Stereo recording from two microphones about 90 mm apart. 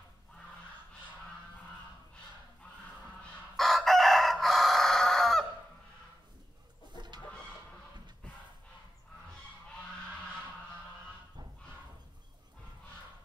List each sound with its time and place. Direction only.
3.5 s chicken: centre (ahead or behind)
6.9 s chicken: 55° right (ahead or behind)